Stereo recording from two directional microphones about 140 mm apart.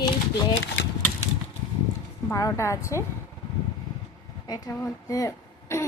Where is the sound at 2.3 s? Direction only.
20° left (ahead or behind).